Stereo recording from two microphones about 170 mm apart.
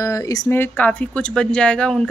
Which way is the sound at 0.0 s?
20° left (ahead or behind).